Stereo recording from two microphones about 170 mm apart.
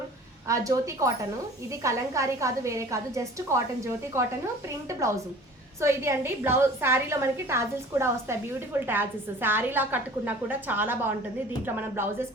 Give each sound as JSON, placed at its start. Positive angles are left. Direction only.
{"t": 0.4, "sound": "a woman's voice", "side_deg": -20}